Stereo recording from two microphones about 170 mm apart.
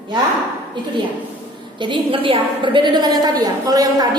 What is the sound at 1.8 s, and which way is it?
A woman's voice, 30° right (ahead or behind).